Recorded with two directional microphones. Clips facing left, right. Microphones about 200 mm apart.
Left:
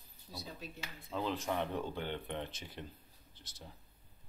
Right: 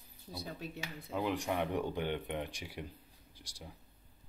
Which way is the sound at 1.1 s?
15° right (ahead or behind).